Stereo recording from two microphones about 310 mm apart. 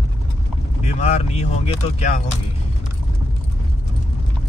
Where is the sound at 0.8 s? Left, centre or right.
Centre.